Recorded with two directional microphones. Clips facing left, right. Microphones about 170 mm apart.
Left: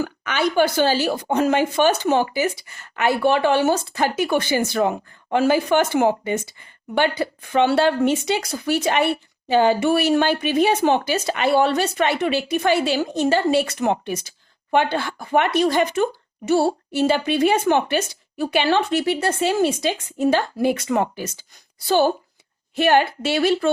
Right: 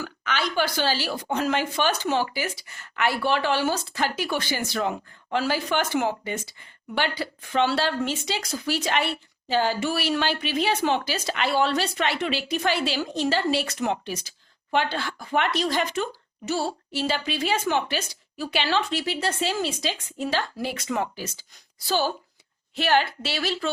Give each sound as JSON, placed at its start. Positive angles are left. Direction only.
{"t": 0.0, "sound": "speech", "side_deg": 55}